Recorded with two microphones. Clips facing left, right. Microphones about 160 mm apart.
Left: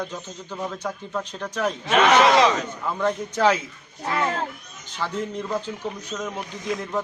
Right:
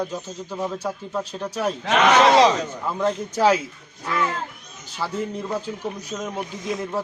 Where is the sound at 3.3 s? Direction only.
10° right (ahead or behind).